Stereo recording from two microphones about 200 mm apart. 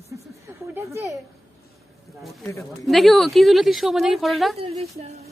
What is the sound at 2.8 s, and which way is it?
Speech, centre (ahead or behind).